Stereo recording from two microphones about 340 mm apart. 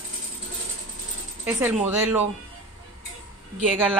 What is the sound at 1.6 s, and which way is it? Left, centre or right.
Speech, centre.